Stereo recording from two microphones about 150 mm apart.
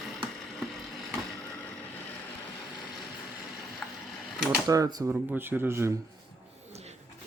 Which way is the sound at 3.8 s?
10° left (ahead or behind).